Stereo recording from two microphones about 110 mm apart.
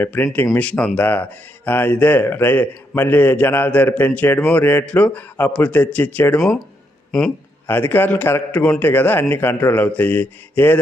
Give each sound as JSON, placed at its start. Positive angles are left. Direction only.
{"t": 0.0, "sound": "speech", "side_deg": 20}
{"t": 7.1, "sound": "speech", "side_deg": 5}
{"t": 7.7, "sound": "speech", "side_deg": 20}